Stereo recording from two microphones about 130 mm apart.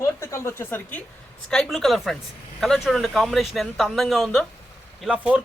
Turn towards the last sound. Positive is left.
turn(degrees=-10)  # may be behind; listen again after turning